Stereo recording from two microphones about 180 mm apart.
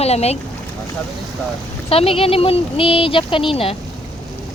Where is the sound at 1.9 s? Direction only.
30° left (ahead or behind).